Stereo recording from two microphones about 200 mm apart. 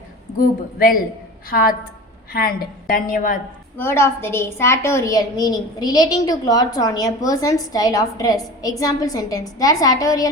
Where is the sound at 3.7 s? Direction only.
10° left (ahead or behind).